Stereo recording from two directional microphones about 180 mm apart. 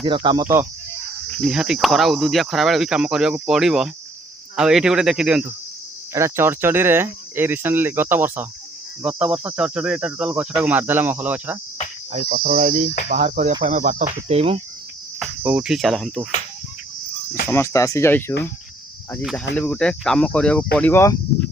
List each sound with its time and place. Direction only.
0.0 s speech: 25° right (ahead or behind)
0.4 s speech: 15° right (ahead or behind)
1.4 s speech: 5° right (ahead or behind)
12.3 s speech: 50° right (ahead or behind); by 14.6 s 35° right (ahead or behind)
15.2 s speech: 5° right (ahead or behind)
17.5 s speech: 15° left (ahead or behind)
19.5 s speech: 5° left (ahead or behind)